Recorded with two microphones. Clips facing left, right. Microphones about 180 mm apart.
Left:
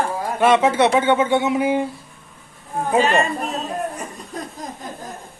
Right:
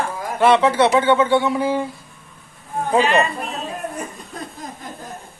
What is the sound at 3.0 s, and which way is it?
Speech, 45° left (ahead or behind).